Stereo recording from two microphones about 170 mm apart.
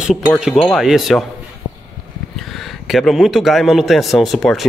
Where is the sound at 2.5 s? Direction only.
Centre (ahead or behind).